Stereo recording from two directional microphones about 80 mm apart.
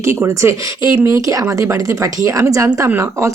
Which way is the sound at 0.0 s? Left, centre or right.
Right.